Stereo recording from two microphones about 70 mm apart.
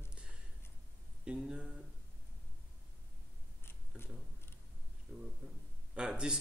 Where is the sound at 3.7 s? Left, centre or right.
Left.